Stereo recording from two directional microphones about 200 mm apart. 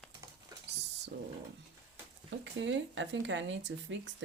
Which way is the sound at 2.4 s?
65° right (ahead or behind).